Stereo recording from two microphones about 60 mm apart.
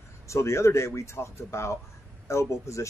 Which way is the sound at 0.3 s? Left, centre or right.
Left.